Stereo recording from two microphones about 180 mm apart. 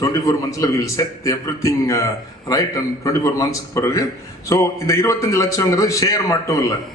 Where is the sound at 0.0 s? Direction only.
20° left (ahead or behind).